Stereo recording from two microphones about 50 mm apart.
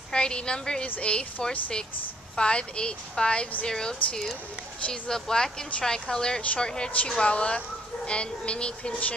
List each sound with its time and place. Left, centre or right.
0.1 s a woman's voice: centre
0.8 s a woman's voice: left